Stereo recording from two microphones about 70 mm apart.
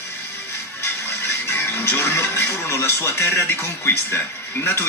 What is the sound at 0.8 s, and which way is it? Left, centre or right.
Music, left.